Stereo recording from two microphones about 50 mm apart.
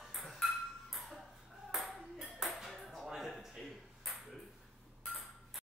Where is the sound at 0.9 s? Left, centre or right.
Centre.